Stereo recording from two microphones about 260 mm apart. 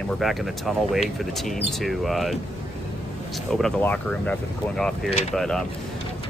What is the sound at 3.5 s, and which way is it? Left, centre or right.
Speech, centre.